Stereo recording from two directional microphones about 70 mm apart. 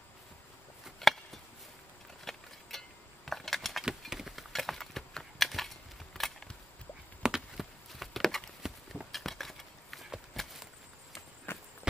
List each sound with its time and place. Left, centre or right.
0.9 s a sound: centre
7.2 s horse: centre
11.5 s walk: left